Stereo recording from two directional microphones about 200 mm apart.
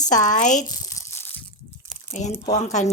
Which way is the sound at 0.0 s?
40° left (ahead or behind).